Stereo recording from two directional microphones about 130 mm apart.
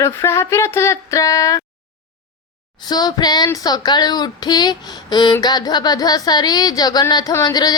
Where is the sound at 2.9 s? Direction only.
30° left (ahead or behind).